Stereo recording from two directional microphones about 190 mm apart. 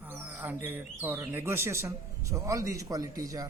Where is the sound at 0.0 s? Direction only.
10° right (ahead or behind).